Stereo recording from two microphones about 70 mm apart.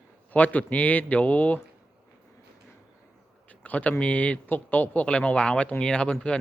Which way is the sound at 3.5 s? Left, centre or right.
Left.